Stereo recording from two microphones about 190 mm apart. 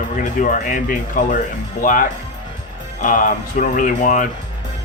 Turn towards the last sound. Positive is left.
turn(degrees=45)  # may be behind; listen again after turning